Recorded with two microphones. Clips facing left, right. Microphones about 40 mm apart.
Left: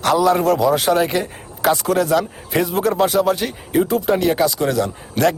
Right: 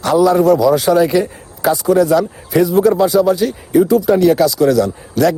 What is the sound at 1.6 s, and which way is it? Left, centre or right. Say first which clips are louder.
A man's voice: right 4 dB; left.